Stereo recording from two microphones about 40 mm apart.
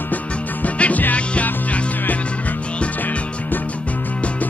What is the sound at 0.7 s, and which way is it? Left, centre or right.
Music, left.